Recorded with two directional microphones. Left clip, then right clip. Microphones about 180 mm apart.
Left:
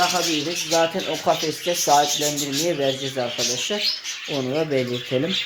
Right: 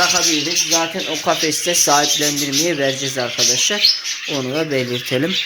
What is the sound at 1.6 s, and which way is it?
Speech, 10° right (ahead or behind).